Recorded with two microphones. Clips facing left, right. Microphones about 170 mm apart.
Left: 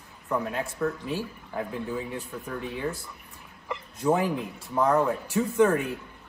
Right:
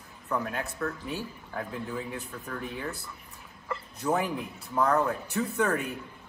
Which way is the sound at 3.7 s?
15° left (ahead or behind).